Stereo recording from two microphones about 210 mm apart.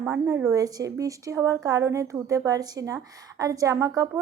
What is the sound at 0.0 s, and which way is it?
A woman's voice, 10° right (ahead or behind).